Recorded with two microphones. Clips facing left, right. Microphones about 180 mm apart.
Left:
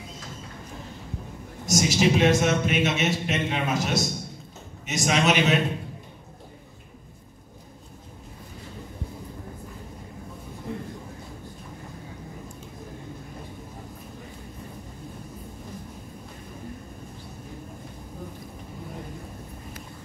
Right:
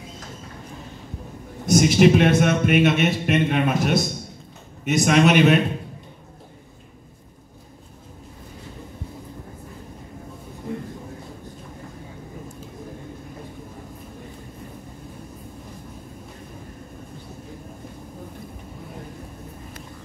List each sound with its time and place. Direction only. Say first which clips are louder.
1.7 s a man's voice: right 7 dB; 55° right (ahead or behind)